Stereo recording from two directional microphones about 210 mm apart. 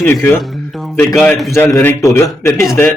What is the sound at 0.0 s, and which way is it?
Speech, 10° left (ahead or behind).